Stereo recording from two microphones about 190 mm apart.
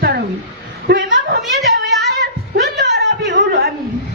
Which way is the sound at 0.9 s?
60° right (ahead or behind).